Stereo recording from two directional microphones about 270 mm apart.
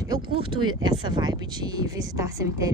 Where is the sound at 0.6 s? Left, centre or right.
Right.